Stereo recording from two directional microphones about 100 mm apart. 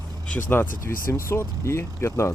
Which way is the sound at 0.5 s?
25° left (ahead or behind).